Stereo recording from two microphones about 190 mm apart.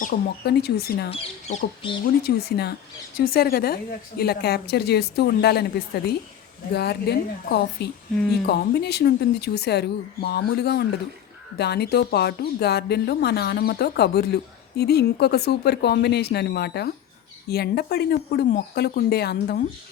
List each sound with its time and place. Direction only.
0.0 s speech: 55° left (ahead or behind)
1.1 s speech: 30° left (ahead or behind)
2.2 s speech: 55° left (ahead or behind)